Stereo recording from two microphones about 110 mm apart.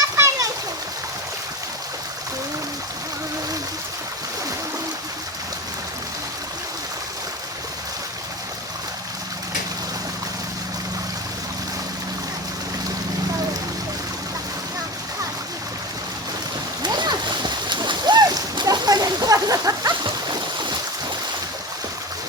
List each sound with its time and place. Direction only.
0.0 s splash: 30° right (ahead or behind)
16.8 s splash: 40° right (ahead or behind)